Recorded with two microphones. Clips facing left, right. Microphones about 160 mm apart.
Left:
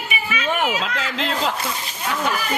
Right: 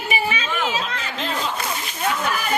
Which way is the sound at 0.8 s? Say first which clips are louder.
Left 3 dB; 90° left.